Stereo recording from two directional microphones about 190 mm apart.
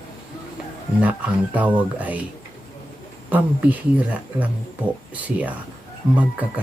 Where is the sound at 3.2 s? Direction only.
10° right (ahead or behind).